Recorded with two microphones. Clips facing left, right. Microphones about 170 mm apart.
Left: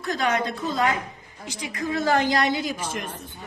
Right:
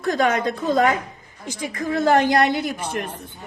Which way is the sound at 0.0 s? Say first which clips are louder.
Right 5 dB; 50° right (ahead or behind).